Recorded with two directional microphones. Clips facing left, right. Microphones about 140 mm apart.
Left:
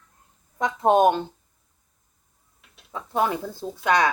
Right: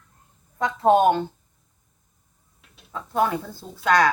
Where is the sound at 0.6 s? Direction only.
15° left (ahead or behind).